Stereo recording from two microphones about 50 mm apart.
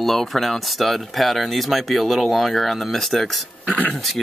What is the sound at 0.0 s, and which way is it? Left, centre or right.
Speech, centre.